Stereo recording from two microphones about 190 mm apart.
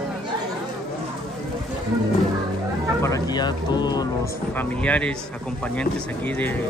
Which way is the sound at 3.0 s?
20° left (ahead or behind).